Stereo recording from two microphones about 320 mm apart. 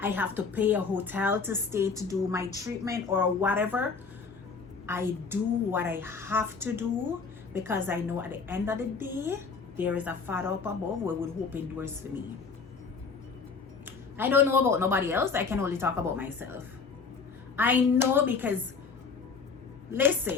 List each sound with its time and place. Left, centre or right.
0.0 s a woman's voice: centre
4.9 s a woman's voice: centre
14.2 s a woman's voice: centre
17.6 s a woman's voice: centre
19.9 s a woman's voice: centre